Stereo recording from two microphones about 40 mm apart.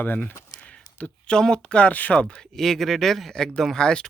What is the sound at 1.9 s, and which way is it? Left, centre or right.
Speech, left.